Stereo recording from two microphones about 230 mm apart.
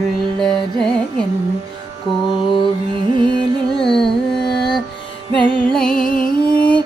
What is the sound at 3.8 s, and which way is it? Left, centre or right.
Carnatic music, centre.